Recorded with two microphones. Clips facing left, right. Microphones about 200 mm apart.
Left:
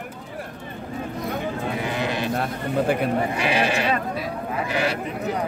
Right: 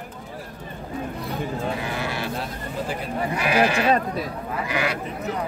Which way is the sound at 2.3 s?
60° left (ahead or behind).